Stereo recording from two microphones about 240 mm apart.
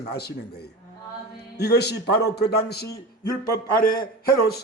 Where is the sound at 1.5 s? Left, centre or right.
Left.